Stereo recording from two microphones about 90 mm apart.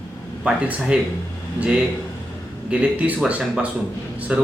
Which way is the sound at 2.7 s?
15° right (ahead or behind).